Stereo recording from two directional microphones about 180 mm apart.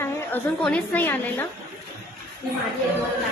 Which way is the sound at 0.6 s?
10° left (ahead or behind).